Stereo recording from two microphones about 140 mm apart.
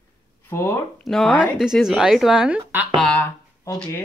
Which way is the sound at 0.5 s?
20° left (ahead or behind).